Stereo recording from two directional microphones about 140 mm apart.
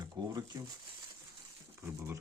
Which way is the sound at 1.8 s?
15° right (ahead or behind).